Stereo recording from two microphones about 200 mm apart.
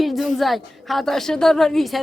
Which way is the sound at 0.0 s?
Centre (ahead or behind).